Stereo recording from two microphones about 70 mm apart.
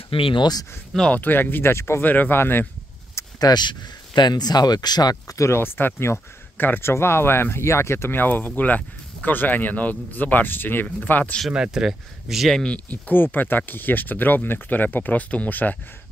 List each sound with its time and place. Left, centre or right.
0.4 s speech: left
1.1 s speech: left
2.0 s speech: left
3.3 s speech: left
5.4 s speech: left
11.5 s speech: centre
12.7 s speech: left